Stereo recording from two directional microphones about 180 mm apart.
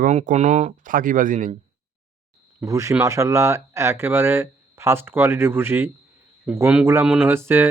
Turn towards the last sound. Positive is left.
turn(degrees=-10)  # may be behind; listen again after turning